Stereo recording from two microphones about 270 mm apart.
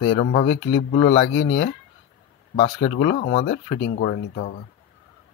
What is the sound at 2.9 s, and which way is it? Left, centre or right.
Speech, left.